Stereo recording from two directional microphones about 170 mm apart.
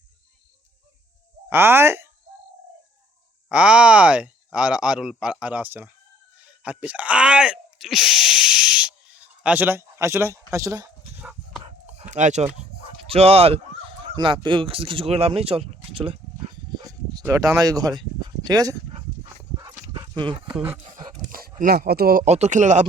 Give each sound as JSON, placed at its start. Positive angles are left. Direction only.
{"t": 1.5, "sound": "speech", "side_deg": -15}
{"t": 3.5, "sound": "speech", "side_deg": -5}
{"t": 11.6, "sound": "dog", "side_deg": -40}
{"t": 12.7, "sound": "bow-wow", "side_deg": -35}
{"t": 18.4, "sound": "speech", "side_deg": -20}
{"t": 19.9, "sound": "horse", "side_deg": -25}
{"t": 21.2, "sound": "dog", "side_deg": -60}
{"t": 21.6, "sound": "speech", "side_deg": -60}
{"t": 22.2, "sound": "speech", "side_deg": -40}